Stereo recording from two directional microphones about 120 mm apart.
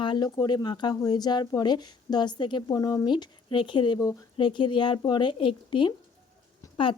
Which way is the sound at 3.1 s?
40° left (ahead or behind).